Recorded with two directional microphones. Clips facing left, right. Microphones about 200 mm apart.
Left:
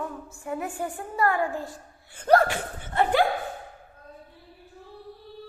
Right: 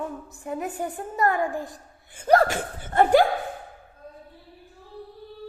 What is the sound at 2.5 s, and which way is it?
Speech, 45° right (ahead or behind).